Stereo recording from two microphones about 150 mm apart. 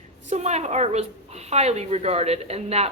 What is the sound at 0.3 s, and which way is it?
A woman's voice, 50° right (ahead or behind).